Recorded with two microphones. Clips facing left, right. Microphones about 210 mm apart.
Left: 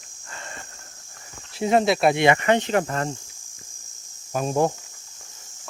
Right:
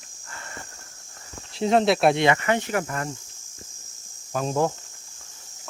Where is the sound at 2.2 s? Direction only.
20° left (ahead or behind).